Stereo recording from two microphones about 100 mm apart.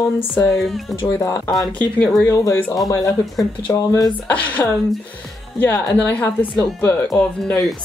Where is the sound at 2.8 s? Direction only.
35° left (ahead or behind).